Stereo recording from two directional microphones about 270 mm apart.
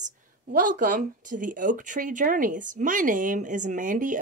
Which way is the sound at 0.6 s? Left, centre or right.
Right.